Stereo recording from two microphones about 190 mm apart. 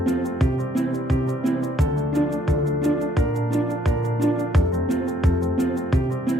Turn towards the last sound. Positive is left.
turn(degrees=0)  # may be behind; listen again after turning